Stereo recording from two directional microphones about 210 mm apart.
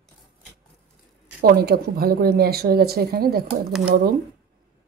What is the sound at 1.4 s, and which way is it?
Speech, 45° right (ahead or behind).